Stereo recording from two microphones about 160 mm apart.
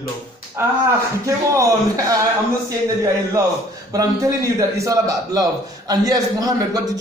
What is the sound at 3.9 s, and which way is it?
A man's voice, 20° right (ahead or behind).